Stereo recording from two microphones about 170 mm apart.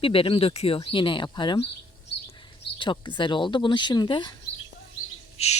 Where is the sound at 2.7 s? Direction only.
30° left (ahead or behind).